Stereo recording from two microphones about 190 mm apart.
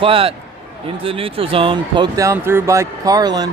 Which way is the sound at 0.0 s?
30° right (ahead or behind).